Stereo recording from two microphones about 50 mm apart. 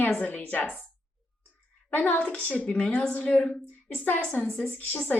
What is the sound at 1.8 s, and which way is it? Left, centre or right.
Speech, left.